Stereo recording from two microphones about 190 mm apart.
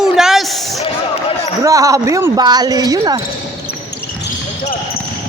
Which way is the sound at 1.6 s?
15° right (ahead or behind).